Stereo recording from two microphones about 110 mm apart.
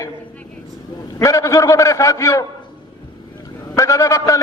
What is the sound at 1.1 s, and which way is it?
A man's voice, 30° left (ahead or behind).